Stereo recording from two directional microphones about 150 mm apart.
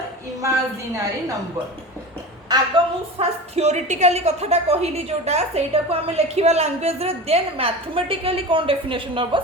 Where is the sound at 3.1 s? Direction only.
45° right (ahead or behind).